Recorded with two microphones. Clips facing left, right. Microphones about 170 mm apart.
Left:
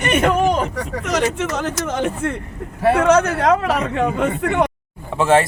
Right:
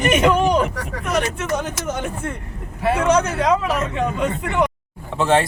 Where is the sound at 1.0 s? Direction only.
90° left.